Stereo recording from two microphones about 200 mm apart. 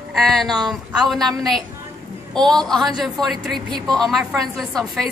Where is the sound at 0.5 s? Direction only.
20° right (ahead or behind).